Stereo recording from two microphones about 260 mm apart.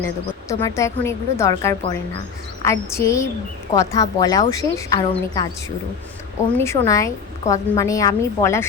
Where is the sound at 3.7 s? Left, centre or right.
Centre.